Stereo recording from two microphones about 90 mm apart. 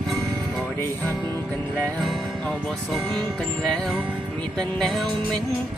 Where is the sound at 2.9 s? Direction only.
5° left (ahead or behind).